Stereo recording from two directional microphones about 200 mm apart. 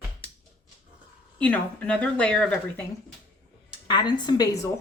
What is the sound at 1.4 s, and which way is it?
Speech, 10° left (ahead or behind).